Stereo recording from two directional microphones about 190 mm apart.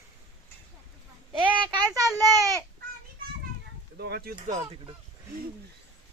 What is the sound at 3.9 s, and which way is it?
Speech, 55° right (ahead or behind).